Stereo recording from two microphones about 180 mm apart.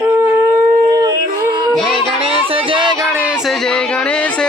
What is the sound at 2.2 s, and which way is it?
Music, 30° right (ahead or behind).